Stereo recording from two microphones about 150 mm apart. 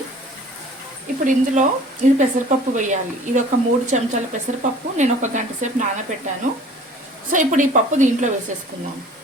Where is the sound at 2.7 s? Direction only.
55° right (ahead or behind).